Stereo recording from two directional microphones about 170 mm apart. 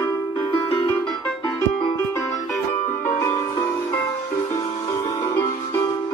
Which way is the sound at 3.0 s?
15° left (ahead or behind).